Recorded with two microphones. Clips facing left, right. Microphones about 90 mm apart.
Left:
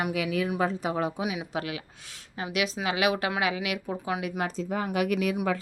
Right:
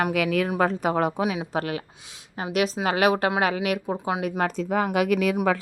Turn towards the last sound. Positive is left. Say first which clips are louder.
# right 4 dB
turn(degrees=-90)